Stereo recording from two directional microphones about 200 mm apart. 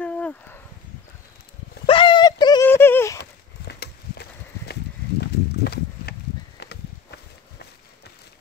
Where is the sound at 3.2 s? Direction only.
55° left (ahead or behind).